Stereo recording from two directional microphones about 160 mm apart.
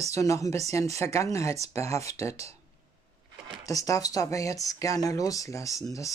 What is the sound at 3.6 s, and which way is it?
Speech, 20° left (ahead or behind).